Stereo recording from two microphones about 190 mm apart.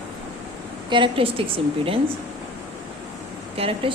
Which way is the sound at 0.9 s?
25° right (ahead or behind).